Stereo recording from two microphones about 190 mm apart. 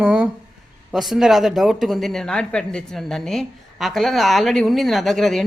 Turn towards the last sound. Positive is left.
turn(degrees=0)  # may be behind; listen again after turning